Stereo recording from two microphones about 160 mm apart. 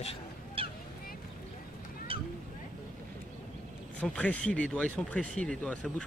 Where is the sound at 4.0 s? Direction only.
5° left (ahead or behind).